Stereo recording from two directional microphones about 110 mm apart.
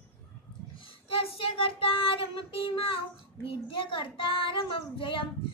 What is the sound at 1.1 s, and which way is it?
Child singing, 55° left (ahead or behind).